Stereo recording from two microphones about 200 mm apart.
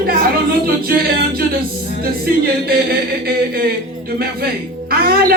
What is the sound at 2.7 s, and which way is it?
Speech, 50° right (ahead or behind).